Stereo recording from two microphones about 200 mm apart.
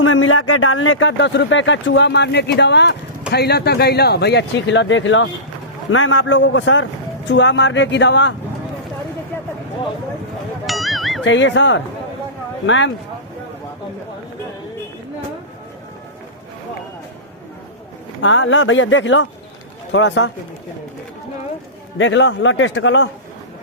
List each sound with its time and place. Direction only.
0.0 s speech: 90° left; by 5.3 s 70° left (ahead or behind)
5.9 s speech: 85° left; by 8.3 s 60° left (ahead or behind)
10.7 s music: centre (ahead or behind)
11.2 s speech: 70° left (ahead or behind)
18.2 s speech: 70° left (ahead or behind)
21.9 s speech: 65° left (ahead or behind)